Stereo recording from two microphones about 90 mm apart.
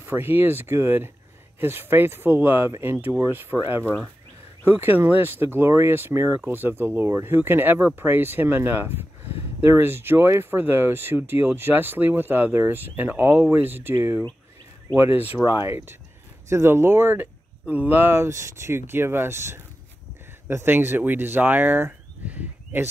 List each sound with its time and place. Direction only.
0.0 s speech: 25° right (ahead or behind)
4.6 s speech: 25° right (ahead or behind)
15.4 s speech: 30° right (ahead or behind)